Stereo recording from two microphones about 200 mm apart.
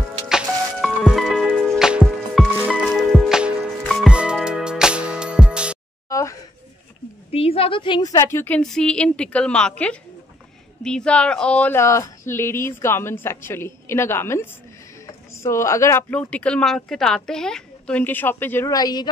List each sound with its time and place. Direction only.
0.3 s music: centre (ahead or behind)
6.0 s a sound: 15° left (ahead or behind)
7.2 s speech: 30° left (ahead or behind)